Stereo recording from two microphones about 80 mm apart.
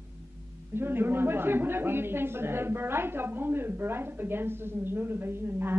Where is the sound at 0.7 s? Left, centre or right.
Right.